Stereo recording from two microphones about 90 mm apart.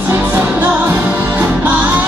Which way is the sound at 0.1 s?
20° right (ahead or behind).